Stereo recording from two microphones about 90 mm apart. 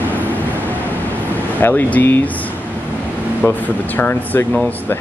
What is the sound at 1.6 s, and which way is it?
Speech, 20° left (ahead or behind).